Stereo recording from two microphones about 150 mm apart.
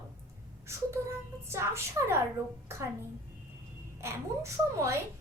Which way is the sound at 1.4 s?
15° right (ahead or behind).